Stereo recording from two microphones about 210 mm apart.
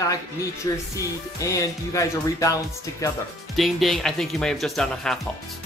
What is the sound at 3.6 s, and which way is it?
Speech, centre (ahead or behind).